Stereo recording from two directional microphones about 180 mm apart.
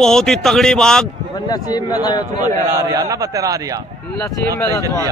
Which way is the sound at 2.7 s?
20° right (ahead or behind).